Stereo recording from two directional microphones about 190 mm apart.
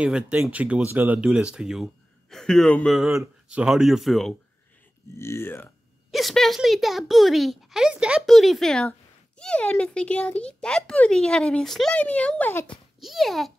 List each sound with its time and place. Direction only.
0.0 s a child's voice: 5° right (ahead or behind)
5.2 s speech: 15° left (ahead or behind)
6.1 s a child's voice: centre (ahead or behind)